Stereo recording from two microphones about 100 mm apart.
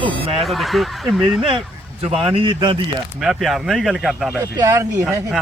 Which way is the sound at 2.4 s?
55° right (ahead or behind).